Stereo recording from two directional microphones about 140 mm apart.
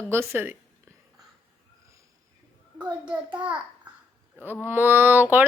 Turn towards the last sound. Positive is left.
turn(degrees=-15)  # may be behind; listen again after turning